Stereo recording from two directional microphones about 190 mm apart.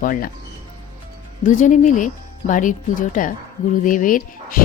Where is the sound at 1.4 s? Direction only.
40° left (ahead or behind).